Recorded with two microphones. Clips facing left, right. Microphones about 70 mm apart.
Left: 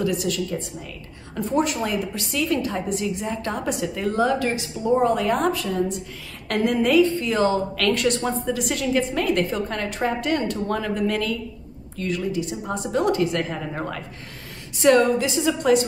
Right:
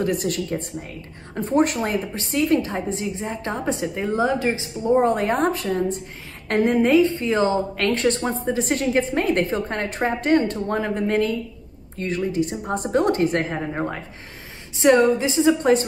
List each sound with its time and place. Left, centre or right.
0.0 s a woman's voice: right
4.8 s a woman's voice: right